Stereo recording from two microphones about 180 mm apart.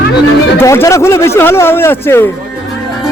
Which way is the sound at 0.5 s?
15° left (ahead or behind).